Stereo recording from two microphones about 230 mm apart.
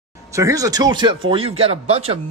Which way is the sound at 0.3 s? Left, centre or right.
Centre.